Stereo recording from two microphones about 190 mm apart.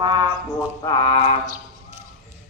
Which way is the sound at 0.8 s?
25° left (ahead or behind).